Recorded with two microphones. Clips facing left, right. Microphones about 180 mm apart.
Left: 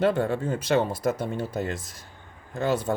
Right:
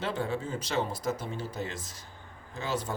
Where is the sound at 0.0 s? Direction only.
55° left (ahead or behind).